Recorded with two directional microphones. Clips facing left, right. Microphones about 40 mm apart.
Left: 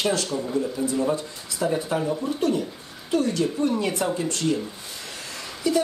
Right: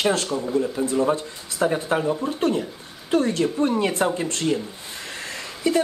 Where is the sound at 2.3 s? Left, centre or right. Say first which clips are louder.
Right 1 dB; right.